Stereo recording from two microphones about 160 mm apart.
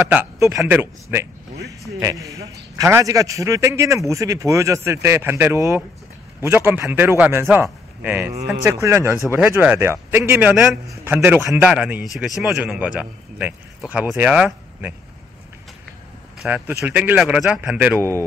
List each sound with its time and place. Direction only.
0.1 s a man's voice: 15° right (ahead or behind)
10.5 s a man's voice: 5° right (ahead or behind)
10.9 s a man's voice: 15° right (ahead or behind)
11.7 s a man's voice: 5° right (ahead or behind)
16.4 s a man's voice: 10° right (ahead or behind)